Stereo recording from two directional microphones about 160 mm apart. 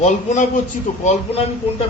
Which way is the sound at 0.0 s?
50° left (ahead or behind).